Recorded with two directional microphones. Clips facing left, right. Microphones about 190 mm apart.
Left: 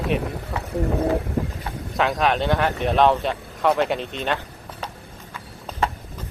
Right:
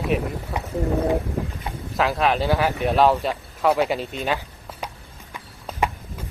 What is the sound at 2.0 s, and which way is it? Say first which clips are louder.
Speech: even; centre (ahead or behind).